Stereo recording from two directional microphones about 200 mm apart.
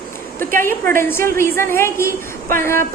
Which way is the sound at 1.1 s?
10° left (ahead or behind).